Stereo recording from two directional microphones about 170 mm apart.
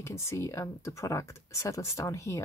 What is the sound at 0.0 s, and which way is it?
Speech, 15° left (ahead or behind).